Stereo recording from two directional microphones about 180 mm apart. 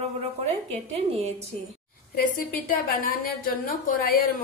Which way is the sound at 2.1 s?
55° left (ahead or behind).